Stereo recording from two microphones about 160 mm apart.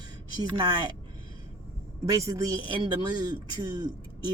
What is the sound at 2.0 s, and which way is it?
Speech, 20° right (ahead or behind).